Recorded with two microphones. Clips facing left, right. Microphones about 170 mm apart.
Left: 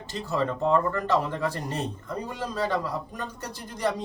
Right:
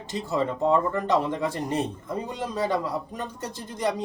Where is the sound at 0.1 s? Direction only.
20° right (ahead or behind).